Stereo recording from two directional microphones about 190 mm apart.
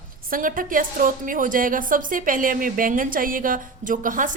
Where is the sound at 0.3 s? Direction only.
45° right (ahead or behind).